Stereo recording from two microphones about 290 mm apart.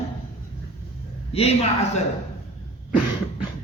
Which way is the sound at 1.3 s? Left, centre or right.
Left.